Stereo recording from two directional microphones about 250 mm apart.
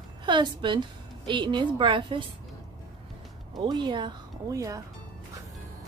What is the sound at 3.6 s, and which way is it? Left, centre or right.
Speech, centre.